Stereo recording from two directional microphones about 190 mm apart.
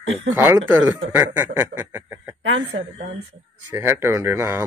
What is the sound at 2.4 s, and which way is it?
Speech, 75° right (ahead or behind).